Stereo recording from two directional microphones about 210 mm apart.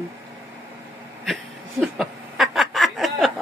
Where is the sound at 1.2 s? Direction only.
Centre (ahead or behind).